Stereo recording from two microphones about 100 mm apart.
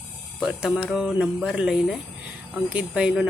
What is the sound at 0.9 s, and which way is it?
Mantra, 5° right (ahead or behind).